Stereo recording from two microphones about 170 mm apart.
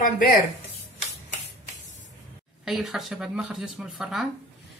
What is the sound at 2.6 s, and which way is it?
Speech, centre (ahead or behind).